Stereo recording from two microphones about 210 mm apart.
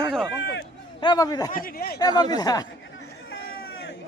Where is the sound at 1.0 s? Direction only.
20° left (ahead or behind).